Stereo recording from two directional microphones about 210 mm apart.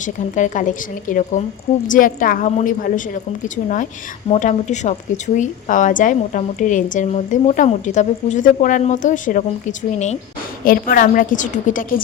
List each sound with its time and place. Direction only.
0.0 s speech: 35° left (ahead or behind)
4.3 s speech: 35° left (ahead or behind)
10.6 s speech: 45° left (ahead or behind)